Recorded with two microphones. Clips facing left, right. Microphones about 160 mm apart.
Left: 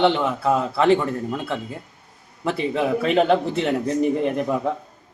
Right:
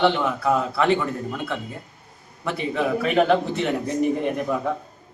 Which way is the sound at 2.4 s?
30° left (ahead or behind).